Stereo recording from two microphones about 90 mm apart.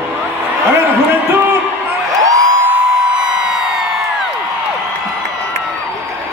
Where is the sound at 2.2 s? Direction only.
40° right (ahead or behind).